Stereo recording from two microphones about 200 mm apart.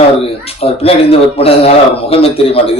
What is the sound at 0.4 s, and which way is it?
A man's voice, 30° left (ahead or behind).